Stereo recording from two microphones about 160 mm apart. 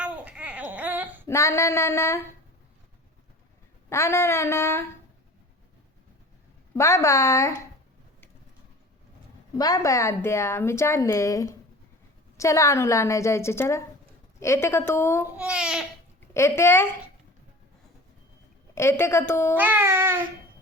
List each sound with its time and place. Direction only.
0.0 s a sound: 10° right (ahead or behind)
1.3 s a woman's voice: 20° left (ahead or behind)
3.8 s a woman's voice: 15° left (ahead or behind)
6.7 s speech: 20° left (ahead or behind)
9.6 s a woman's voice: 20° left (ahead or behind)
15.4 s speech: 5° right (ahead or behind)
16.3 s a woman's voice: 15° left (ahead or behind)
18.7 s a woman's voice: 15° left (ahead or behind)
19.5 s a sound: 10° right (ahead or behind)